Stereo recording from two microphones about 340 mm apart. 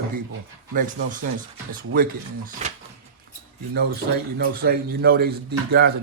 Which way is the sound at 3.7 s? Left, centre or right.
Right.